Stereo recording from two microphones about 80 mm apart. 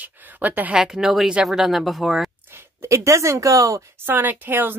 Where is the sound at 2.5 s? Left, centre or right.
Right.